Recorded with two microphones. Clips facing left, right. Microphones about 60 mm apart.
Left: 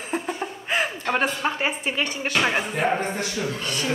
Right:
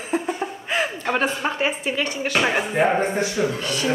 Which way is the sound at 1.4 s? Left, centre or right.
Centre.